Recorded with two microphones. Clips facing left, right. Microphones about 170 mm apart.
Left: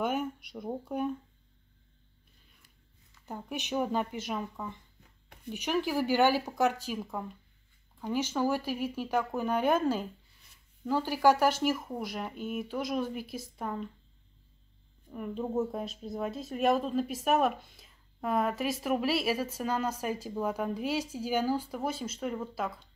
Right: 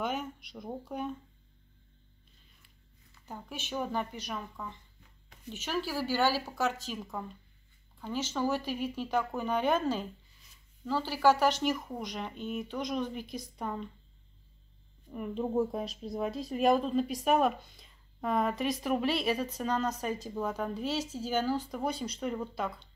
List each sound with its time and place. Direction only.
0.0 s speech: 10° left (ahead or behind)
3.3 s speech: 15° left (ahead or behind)
15.0 s speech: centre (ahead or behind)